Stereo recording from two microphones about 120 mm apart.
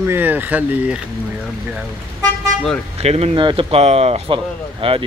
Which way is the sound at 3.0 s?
60° right (ahead or behind).